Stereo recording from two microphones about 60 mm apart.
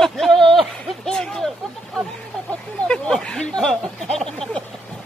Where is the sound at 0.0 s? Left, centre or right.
Centre.